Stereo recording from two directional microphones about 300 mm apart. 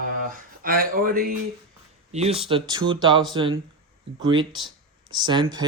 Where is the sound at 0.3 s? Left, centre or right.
Right.